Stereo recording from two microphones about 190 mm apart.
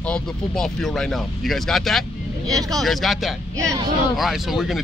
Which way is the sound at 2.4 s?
20° right (ahead or behind).